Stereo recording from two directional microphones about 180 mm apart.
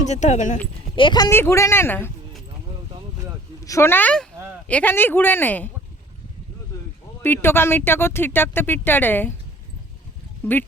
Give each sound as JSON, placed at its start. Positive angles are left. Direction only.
{"t": 0.0, "sound": "speech", "side_deg": 40}
{"t": 0.9, "sound": "speech", "side_deg": 25}
{"t": 3.6, "sound": "speech", "side_deg": 15}
{"t": 7.2, "sound": "speech", "side_deg": 10}
{"t": 10.4, "sound": "speech", "side_deg": 10}